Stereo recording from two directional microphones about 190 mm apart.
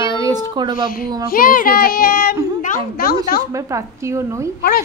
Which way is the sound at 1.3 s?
50° left (ahead or behind).